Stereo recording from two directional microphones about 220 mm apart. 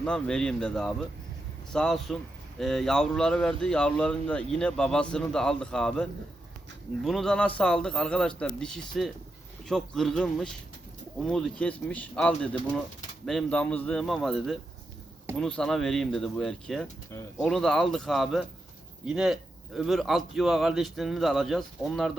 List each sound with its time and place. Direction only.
0.0 s speech: 5° left (ahead or behind)
17.1 s speech: 15° left (ahead or behind)
17.5 s speech: centre (ahead or behind)